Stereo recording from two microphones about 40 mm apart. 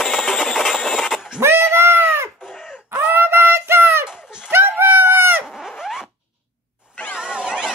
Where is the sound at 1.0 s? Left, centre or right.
Centre.